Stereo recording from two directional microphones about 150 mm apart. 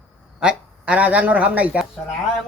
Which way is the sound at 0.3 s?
5° right (ahead or behind).